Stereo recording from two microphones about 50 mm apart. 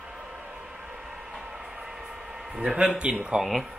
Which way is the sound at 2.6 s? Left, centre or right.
Right.